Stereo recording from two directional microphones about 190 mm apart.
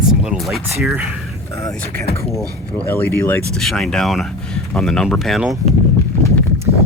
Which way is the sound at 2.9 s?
10° left (ahead or behind).